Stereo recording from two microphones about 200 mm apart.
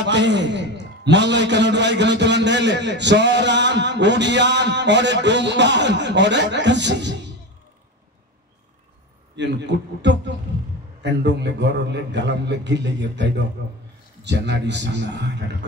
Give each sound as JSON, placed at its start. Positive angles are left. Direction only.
{"t": 0.0, "sound": "a man's voice", "side_deg": -60}
{"t": 9.4, "sound": "a man's voice", "side_deg": -60}